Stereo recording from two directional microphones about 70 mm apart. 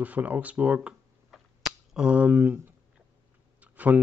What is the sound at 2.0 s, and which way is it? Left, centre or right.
Speech, centre.